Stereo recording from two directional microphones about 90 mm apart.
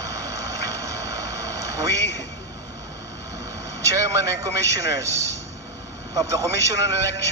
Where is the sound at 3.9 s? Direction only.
35° right (ahead or behind).